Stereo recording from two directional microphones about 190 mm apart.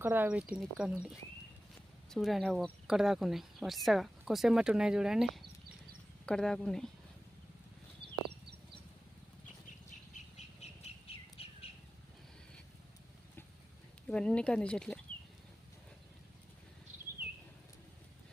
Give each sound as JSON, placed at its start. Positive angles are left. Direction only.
{"t": 0.0, "sound": "speech", "side_deg": -10}
{"t": 8.0, "sound": "a sound", "side_deg": -60}
{"t": 10.3, "sound": "bird", "side_deg": 35}
{"t": 14.1, "sound": "speech", "side_deg": 5}